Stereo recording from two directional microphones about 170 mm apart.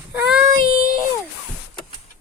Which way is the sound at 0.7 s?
60° left (ahead or behind).